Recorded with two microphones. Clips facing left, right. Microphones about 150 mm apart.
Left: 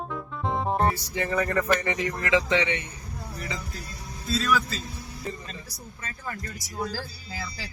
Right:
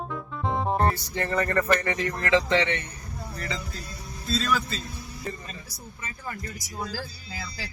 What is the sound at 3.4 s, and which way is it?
Speech, 10° left (ahead or behind).